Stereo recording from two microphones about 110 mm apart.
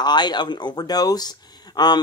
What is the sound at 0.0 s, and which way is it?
Speech, 40° left (ahead or behind).